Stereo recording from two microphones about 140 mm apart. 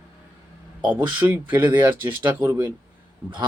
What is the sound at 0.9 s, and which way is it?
Speech, 15° right (ahead or behind).